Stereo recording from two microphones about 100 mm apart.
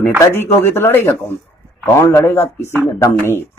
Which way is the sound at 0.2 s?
25° left (ahead or behind).